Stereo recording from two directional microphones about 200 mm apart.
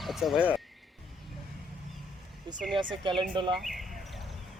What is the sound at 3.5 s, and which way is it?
Speech, centre (ahead or behind).